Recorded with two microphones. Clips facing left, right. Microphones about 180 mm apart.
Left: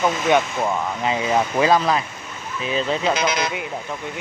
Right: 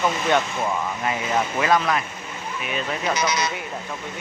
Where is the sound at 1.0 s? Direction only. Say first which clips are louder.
Left 5 dB; 25° left (ahead or behind).